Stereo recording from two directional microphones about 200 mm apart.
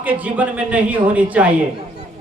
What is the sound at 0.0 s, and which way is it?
A man's voice, 10° right (ahead or behind).